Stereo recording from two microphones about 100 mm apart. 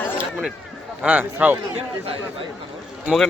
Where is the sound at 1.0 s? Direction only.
15° right (ahead or behind).